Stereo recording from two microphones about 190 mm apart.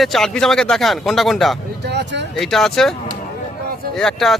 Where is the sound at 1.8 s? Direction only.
65° right (ahead or behind).